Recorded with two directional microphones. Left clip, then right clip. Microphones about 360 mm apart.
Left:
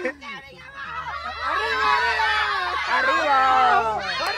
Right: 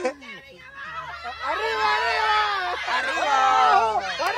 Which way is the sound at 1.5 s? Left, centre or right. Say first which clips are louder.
Left 2 dB; right.